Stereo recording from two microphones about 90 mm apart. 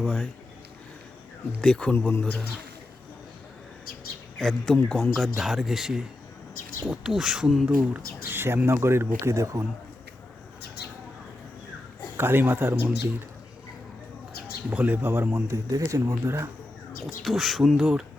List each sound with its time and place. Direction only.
0.0 s a man's voice: 5° left (ahead or behind)
1.6 s speech: 10° left (ahead or behind)
4.4 s a man's voice: 5° left (ahead or behind)
7.9 s speech: 25° right (ahead or behind)
12.1 s speech: 25° right (ahead or behind)
14.7 s speech: 15° right (ahead or behind)
17.2 s a man's voice: centre (ahead or behind)
17.7 s speech: 10° right (ahead or behind)